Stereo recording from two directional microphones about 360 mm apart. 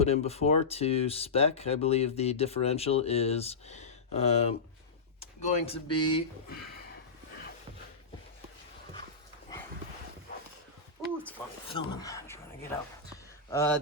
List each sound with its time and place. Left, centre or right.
0.0 s speech: centre
5.5 s speech: centre
11.0 s a sound: centre
11.7 s speech: centre
13.5 s speech: centre